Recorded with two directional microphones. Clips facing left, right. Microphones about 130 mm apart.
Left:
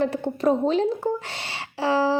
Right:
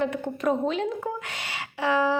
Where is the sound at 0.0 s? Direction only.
35° left (ahead or behind).